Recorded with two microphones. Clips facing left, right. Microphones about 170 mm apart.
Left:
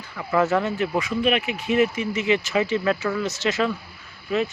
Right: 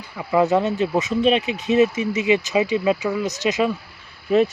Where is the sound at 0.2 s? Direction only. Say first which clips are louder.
Right 3 dB; 15° right (ahead or behind).